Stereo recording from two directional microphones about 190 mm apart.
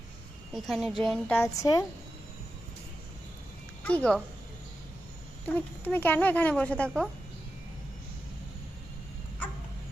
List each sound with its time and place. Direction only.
0.5 s speech: centre (ahead or behind)
1.4 s a woman's voice: 20° left (ahead or behind)
3.8 s speech: 5° left (ahead or behind)
5.8 s a woman's voice: 10° left (ahead or behind)